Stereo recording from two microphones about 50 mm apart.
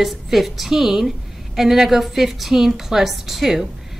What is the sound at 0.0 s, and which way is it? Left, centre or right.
A woman's voice, centre.